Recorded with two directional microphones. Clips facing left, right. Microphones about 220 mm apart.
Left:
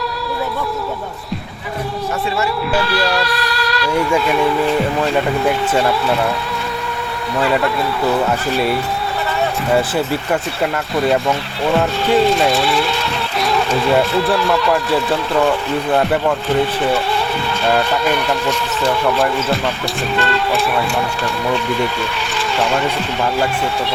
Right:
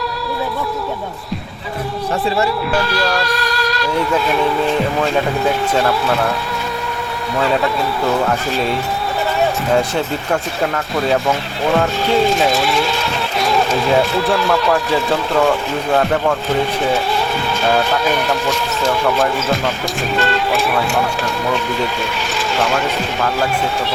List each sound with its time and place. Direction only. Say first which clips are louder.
3.0 s music: even; centre (ahead or behind)
3.2 s music: right 1 dB; 45° right (ahead or behind)
5.7 s speech: even; centre (ahead or behind)
7.3 s speech: even; centre (ahead or behind)
17.7 s speech: even; centre (ahead or behind)